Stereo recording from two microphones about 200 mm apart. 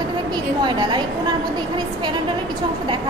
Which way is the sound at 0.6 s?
20° right (ahead or behind).